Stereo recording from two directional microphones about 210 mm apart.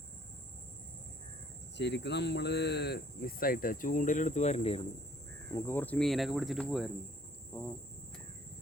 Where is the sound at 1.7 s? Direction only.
55° left (ahead or behind); by 4.8 s 30° left (ahead or behind).